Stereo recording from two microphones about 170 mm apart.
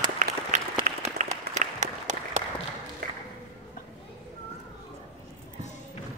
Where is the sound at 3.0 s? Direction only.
60° right (ahead or behind).